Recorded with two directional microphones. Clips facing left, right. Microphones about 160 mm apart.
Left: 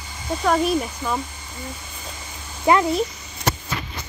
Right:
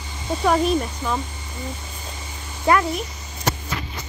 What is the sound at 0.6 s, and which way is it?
Speech, 5° left (ahead or behind).